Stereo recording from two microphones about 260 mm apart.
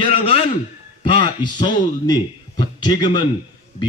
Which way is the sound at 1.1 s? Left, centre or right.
Centre.